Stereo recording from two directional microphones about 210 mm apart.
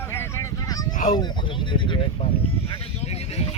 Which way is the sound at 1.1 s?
20° left (ahead or behind).